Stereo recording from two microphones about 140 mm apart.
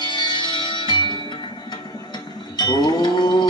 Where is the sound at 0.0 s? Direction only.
30° left (ahead or behind).